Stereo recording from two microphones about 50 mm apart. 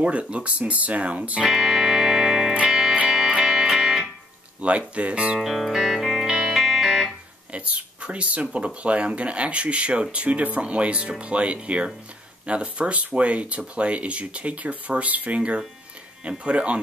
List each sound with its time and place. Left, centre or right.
0.0 s speech: right
1.4 s music: centre
4.6 s speech: right
5.4 s music: centre
7.5 s speech: right